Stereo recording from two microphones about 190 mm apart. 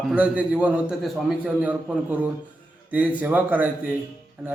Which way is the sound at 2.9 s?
10° right (ahead or behind).